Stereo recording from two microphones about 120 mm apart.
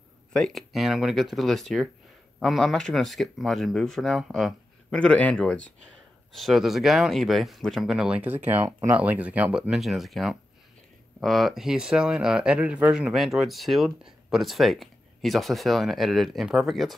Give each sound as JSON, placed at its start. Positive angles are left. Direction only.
{"t": 0.3, "sound": "speech", "side_deg": 0}
{"t": 8.6, "sound": "speech", "side_deg": -25}
{"t": 8.9, "sound": "speech", "side_deg": -15}